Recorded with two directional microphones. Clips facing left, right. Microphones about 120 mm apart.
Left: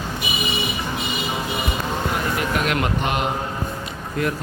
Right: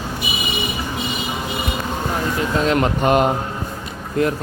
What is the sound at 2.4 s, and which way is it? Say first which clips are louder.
Speech: right 8 dB; 30° right (ahead or behind).